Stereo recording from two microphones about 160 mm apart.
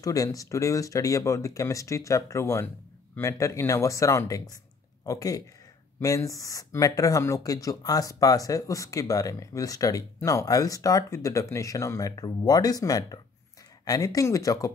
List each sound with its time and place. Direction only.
0.0 s speech: 20° left (ahead or behind)